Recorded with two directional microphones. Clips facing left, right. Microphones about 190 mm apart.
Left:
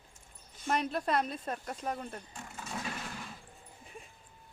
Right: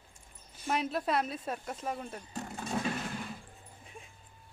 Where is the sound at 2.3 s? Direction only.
40° right (ahead or behind).